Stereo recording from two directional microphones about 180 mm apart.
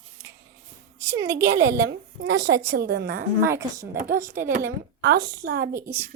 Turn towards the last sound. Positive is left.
turn(degrees=-15)  # may be behind; listen again after turning